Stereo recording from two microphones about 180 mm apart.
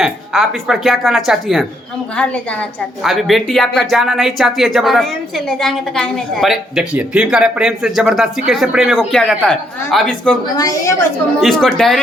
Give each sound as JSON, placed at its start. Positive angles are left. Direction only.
{"t": 0.0, "sound": "a woman's voice", "side_deg": 0}
{"t": 10.6, "sound": "a woman's voice", "side_deg": 20}
{"t": 11.3, "sound": "a woman's voice", "side_deg": 0}